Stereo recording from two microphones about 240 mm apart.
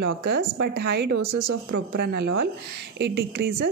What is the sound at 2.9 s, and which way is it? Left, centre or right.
Speech, right.